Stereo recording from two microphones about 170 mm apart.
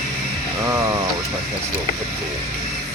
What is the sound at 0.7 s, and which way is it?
Speech, 20° right (ahead or behind).